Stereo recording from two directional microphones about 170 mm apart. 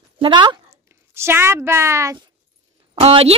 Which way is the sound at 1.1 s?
15° right (ahead or behind).